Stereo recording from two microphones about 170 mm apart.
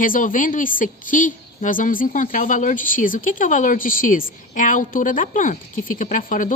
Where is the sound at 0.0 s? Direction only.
55° left (ahead or behind).